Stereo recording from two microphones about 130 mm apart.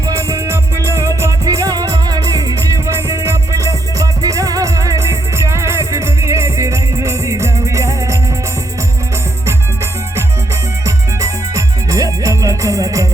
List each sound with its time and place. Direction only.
0.1 s music: 25° right (ahead or behind)
10.8 s music: 25° right (ahead or behind)